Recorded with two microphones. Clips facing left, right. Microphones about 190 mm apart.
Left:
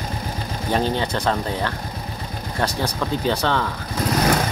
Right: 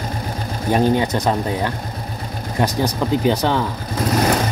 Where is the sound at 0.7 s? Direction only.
15° right (ahead or behind).